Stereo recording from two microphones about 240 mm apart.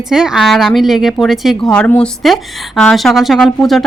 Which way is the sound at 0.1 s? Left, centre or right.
Centre.